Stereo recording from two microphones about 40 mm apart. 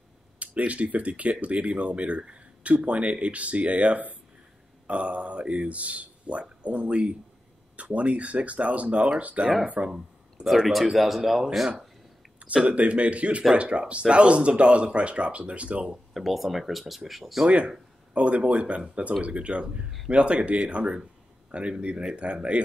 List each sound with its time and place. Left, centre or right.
0.4 s speech: right
10.4 s speech: right
11.0 s speech: centre
12.6 s speech: right
16.1 s speech: centre
17.5 s speech: right